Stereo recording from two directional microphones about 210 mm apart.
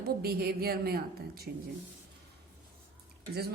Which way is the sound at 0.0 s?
50° right (ahead or behind).